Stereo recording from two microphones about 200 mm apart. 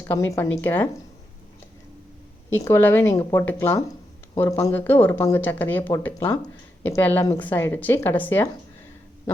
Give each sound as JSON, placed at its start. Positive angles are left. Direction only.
{"t": 0.0, "sound": "speech", "side_deg": 10}
{"t": 2.5, "sound": "speech", "side_deg": 10}